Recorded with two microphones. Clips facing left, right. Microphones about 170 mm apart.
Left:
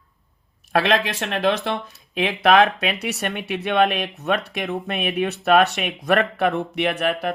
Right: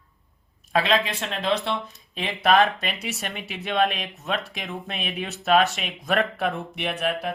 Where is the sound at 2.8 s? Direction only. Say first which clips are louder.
Left 6 dB; 65° left (ahead or behind).